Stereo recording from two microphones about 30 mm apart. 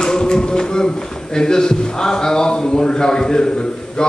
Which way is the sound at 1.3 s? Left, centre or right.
Left.